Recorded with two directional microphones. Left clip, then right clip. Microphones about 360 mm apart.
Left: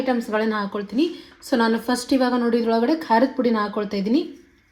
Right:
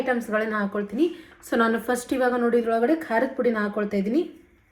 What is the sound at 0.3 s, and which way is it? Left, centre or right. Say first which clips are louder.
Speech: left 2 dB; centre.